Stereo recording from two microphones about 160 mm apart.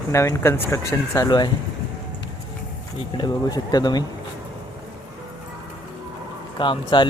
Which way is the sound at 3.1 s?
25° left (ahead or behind).